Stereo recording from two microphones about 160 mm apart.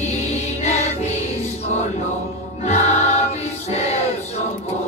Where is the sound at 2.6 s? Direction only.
45° left (ahead or behind).